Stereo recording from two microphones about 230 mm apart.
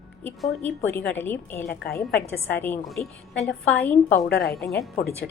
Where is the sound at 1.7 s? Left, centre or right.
Left.